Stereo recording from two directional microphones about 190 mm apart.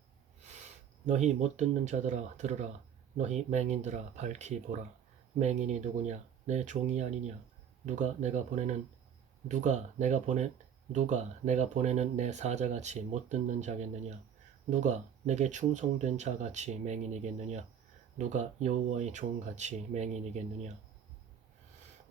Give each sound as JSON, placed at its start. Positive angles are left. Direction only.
{"t": 0.4, "sound": "speech", "side_deg": -40}